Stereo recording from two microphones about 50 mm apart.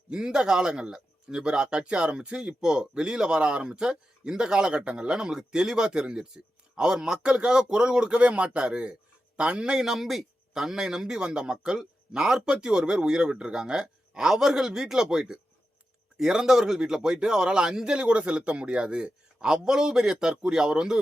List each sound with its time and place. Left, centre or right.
0.1 s speech: centre